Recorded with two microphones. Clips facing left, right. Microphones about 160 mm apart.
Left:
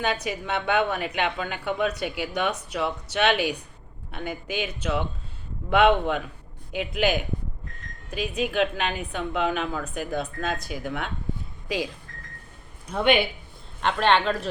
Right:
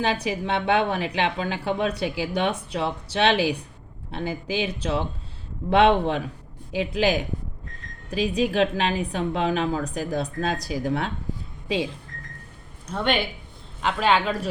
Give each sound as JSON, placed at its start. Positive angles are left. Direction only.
{"t": 0.0, "sound": "a woman's voice", "side_deg": -30}
{"t": 12.9, "sound": "speech", "side_deg": 10}
{"t": 13.8, "sound": "speech", "side_deg": -5}